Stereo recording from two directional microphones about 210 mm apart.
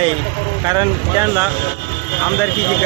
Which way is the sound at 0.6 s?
20° right (ahead or behind).